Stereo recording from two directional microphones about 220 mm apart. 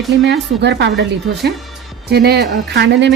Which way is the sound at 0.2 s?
50° right (ahead or behind).